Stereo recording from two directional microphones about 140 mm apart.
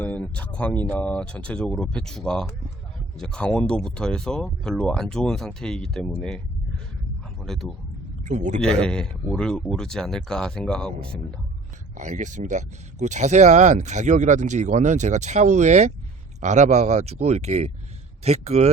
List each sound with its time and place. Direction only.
0.0 s speech: 10° left (ahead or behind)
7.4 s speech: 5° left (ahead or behind)
8.2 s a man's voice: 60° right (ahead or behind)
8.6 s speech: 5° left (ahead or behind)
11.9 s speech: 60° right (ahead or behind)